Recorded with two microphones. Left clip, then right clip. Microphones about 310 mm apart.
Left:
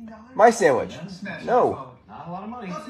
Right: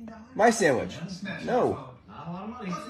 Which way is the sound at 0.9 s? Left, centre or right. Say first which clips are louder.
Left 3 dB; left.